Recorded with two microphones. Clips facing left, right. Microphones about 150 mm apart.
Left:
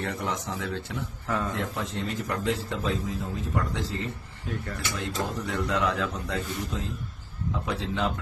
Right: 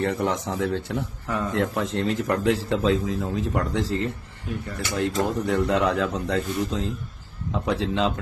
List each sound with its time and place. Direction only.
0.0 s a man's voice: 60° right (ahead or behind)
1.3 s a man's voice: 15° right (ahead or behind)
1.5 s a man's voice: 70° right (ahead or behind)